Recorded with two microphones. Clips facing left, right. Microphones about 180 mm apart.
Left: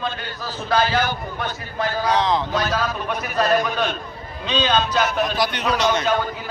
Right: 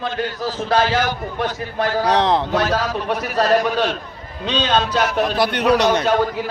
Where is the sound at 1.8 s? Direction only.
70° right (ahead or behind).